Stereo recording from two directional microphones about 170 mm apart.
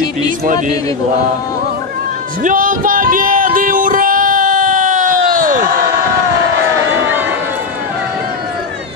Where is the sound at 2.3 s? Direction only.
50° right (ahead or behind).